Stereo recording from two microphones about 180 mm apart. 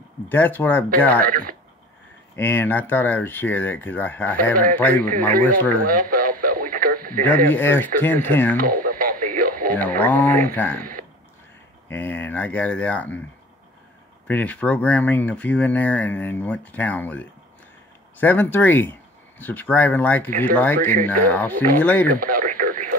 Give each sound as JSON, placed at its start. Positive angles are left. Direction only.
{"t": 0.3, "sound": "speech", "side_deg": 10}
{"t": 1.2, "sound": "speech", "side_deg": -50}
{"t": 2.3, "sound": "speech", "side_deg": 10}
{"t": 5.9, "sound": "radio", "side_deg": -50}
{"t": 7.4, "sound": "speech", "side_deg": 10}
{"t": 8.5, "sound": "radio", "side_deg": -50}
{"t": 9.8, "sound": "speech", "side_deg": 10}
{"t": 11.9, "sound": "speech", "side_deg": 10}
{"t": 14.2, "sound": "speech", "side_deg": 10}
{"t": 22.2, "sound": "radio", "side_deg": -50}